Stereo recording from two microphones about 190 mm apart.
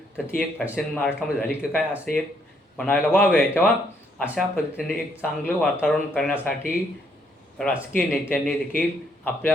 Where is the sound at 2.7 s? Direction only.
5° left (ahead or behind).